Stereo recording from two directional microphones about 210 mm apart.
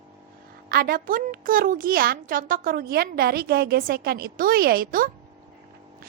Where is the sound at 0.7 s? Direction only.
45° right (ahead or behind).